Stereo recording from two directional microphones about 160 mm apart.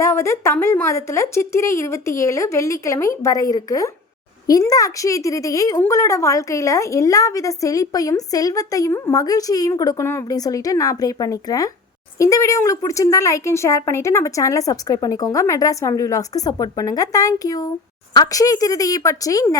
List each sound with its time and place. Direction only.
0.0 s a woman's voice: 15° left (ahead or behind)